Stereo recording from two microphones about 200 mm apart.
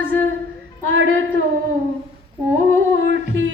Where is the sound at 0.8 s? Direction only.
75° right (ahead or behind).